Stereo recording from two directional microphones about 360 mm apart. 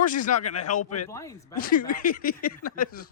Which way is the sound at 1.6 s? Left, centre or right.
Left.